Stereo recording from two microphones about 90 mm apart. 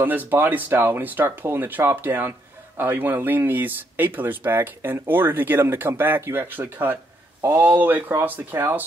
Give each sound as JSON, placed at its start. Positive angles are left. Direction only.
{"t": 0.0, "sound": "speech", "side_deg": -20}